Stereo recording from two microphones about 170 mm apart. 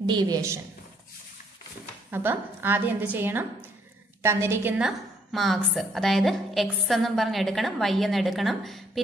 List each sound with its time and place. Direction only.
0.0 s a woman's voice: 25° right (ahead or behind)
2.0 s a woman's voice: 10° right (ahead or behind)